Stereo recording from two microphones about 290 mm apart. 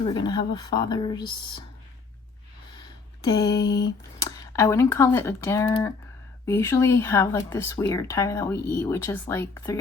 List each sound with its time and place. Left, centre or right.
0.1 s speech: centre
3.2 s speech: centre
3.7 s a sound: left
4.2 s speech: centre